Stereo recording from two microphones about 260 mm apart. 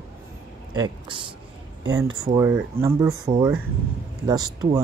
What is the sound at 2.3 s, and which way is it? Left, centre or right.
Speech, centre.